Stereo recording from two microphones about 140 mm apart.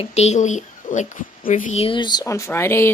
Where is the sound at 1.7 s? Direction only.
40° left (ahead or behind); by 2.8 s 20° left (ahead or behind).